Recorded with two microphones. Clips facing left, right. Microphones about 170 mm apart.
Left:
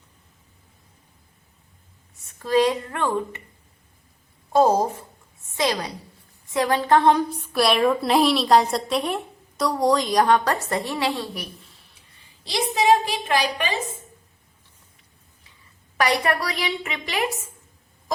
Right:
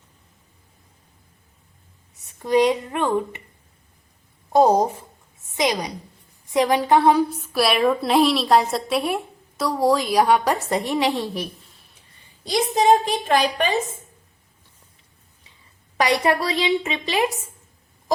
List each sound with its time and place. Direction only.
2.4 s a woman's voice: 20° right (ahead or behind)
4.5 s a woman's voice: 15° right (ahead or behind)
12.5 s a woman's voice: 45° right (ahead or behind)
16.0 s a woman's voice: 25° right (ahead or behind)